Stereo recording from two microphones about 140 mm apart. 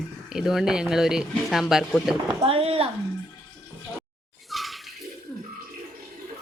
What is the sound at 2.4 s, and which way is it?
Speech, 45° right (ahead or behind).